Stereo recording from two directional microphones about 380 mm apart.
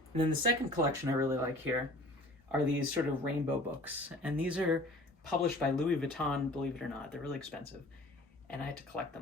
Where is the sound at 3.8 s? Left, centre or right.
Centre.